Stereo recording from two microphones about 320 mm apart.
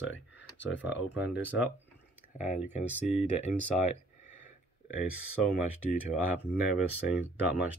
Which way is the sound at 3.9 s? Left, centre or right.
Left.